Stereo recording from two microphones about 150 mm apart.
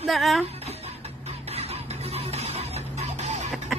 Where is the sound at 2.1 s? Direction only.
45° right (ahead or behind).